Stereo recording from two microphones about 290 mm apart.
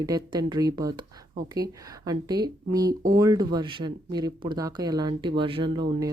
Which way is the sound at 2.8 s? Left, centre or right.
Right.